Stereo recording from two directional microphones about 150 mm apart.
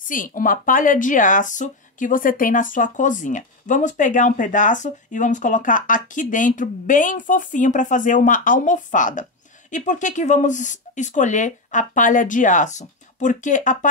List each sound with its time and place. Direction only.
0.1 s speech: 65° left (ahead or behind)